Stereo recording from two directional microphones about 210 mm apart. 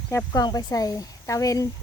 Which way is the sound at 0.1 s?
15° left (ahead or behind).